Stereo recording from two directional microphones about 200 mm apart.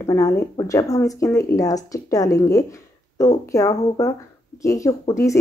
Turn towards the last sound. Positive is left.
turn(degrees=15)  # may be behind; listen again after turning